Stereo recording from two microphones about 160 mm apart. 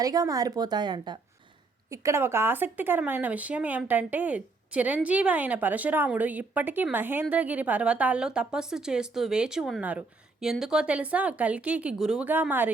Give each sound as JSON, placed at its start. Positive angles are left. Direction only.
{"t": 0.0, "sound": "a woman's voice", "side_deg": -20}